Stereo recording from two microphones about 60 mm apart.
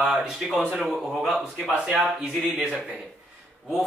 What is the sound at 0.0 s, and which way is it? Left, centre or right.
A man's voice, centre.